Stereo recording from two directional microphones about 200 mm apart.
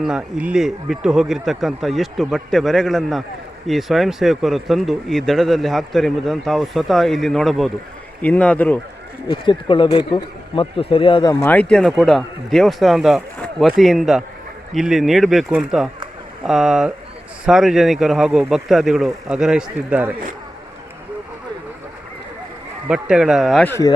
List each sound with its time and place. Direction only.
0.0 s speech: 5° right (ahead or behind)
9.2 s speech: 25° left (ahead or behind)
11.4 s speech: 5° left (ahead or behind)
22.9 s speech: 5° right (ahead or behind)